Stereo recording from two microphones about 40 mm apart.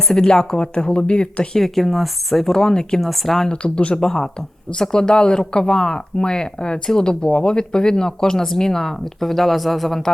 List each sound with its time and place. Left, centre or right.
0.3 s speech: centre
1.5 s speech: centre
3.0 s speech: centre
3.5 s speech: left
3.9 s speech: centre